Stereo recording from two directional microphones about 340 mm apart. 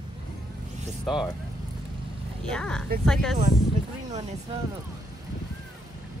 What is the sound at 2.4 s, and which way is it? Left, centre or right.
Speech, centre.